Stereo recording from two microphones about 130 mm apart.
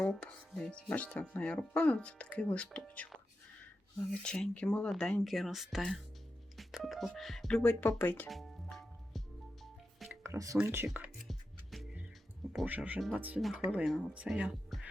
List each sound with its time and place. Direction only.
0.1 s speech: 5° left (ahead or behind)
4.1 s speech: 5° left (ahead or behind)
8.3 s music: centre (ahead or behind)
10.1 s music: 25° right (ahead or behind)
10.6 s speech: 20° right (ahead or behind)
11.2 s music: centre (ahead or behind)
12.6 s speech: 10° right (ahead or behind)